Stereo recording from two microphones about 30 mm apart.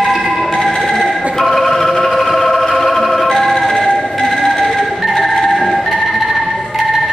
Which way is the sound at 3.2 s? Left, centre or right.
Centre.